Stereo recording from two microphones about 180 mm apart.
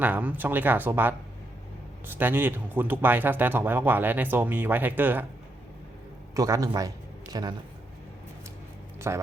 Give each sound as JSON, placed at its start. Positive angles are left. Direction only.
{"t": 0.0, "sound": "speech", "side_deg": -10}
{"t": 6.3, "sound": "a man's voice", "side_deg": -20}
{"t": 9.0, "sound": "a sound", "side_deg": -15}